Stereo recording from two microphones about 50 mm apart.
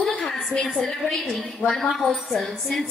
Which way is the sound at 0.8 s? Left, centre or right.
Centre.